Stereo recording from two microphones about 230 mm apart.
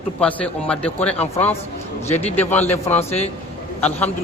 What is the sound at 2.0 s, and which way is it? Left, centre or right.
Speech, left.